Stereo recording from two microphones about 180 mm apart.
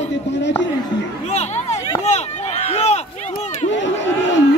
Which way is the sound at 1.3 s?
40° left (ahead or behind).